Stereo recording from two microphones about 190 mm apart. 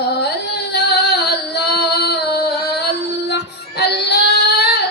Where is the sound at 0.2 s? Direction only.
60° left (ahead or behind).